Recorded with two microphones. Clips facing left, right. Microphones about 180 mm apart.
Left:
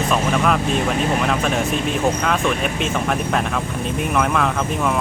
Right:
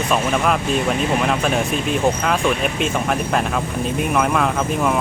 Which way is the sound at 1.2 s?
Centre (ahead or behind).